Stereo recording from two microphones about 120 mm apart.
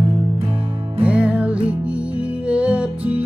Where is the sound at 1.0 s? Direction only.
10° right (ahead or behind).